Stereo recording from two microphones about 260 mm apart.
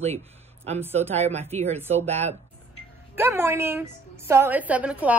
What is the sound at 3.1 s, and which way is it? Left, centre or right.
A woman's voice, centre.